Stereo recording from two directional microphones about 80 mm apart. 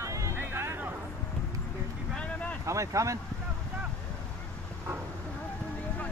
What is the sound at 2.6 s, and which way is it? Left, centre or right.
Speech, right.